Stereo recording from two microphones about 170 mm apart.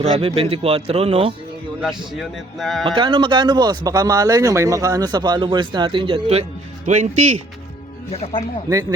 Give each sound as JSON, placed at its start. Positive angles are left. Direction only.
{"t": 0.0, "sound": "a man's voice", "side_deg": -35}
{"t": 1.8, "sound": "a man's voice", "side_deg": 0}
{"t": 2.8, "sound": "speech", "side_deg": -30}
{"t": 6.8, "sound": "speech", "side_deg": -45}
{"t": 8.1, "sound": "speech", "side_deg": 35}